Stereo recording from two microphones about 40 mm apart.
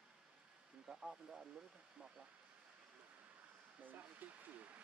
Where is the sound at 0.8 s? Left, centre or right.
Centre.